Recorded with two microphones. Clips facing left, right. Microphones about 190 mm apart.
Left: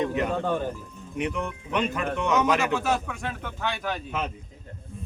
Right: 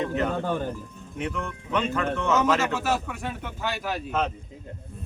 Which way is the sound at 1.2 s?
15° left (ahead or behind).